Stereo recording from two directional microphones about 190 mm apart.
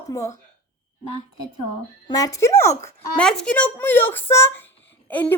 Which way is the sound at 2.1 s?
20° left (ahead or behind).